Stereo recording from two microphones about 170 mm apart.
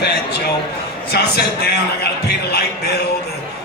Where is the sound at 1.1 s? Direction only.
70° left (ahead or behind).